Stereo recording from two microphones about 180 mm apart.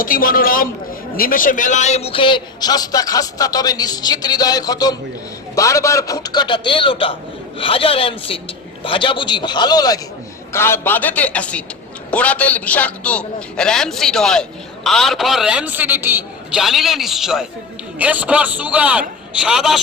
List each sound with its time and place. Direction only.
0.0 s a man's voice: 55° left (ahead or behind); by 19.8 s centre (ahead or behind)